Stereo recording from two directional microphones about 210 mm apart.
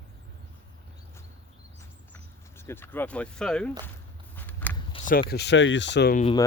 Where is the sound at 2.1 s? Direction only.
10° left (ahead or behind).